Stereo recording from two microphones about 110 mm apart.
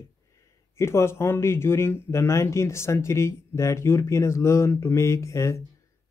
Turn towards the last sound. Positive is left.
turn(degrees=25)  # may be behind; listen again after turning